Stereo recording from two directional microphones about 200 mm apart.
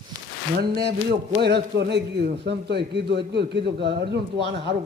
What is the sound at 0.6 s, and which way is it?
Speech, 55° right (ahead or behind).